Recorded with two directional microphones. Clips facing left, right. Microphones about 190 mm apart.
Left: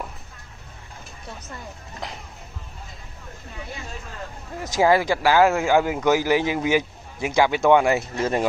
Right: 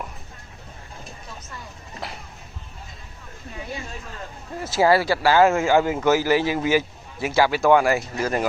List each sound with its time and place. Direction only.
4.6 s a man's voice: 15° left (ahead or behind)